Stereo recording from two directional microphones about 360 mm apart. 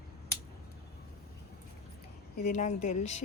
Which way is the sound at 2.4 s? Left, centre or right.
Centre.